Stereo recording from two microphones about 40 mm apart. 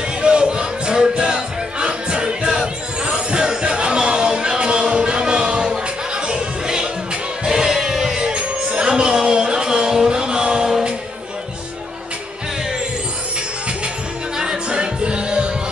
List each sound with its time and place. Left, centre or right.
0.2 s music: right
14.4 s music: centre